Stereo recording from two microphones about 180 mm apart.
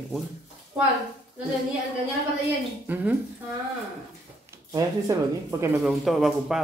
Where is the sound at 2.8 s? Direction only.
10° right (ahead or behind).